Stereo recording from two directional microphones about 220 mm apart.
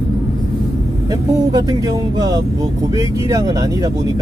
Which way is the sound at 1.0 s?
15° right (ahead or behind).